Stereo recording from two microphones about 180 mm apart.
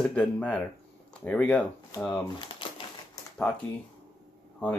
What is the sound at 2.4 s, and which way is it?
Typewriter, 30° left (ahead or behind).